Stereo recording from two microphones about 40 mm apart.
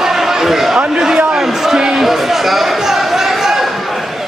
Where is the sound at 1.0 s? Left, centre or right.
Right.